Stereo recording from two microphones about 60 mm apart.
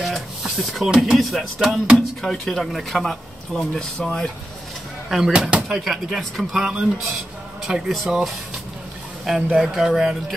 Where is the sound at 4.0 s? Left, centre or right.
Centre.